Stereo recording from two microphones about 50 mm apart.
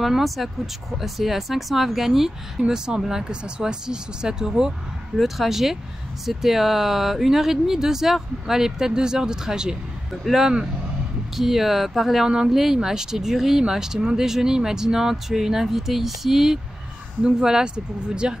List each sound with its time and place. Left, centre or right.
0.0 s speech: centre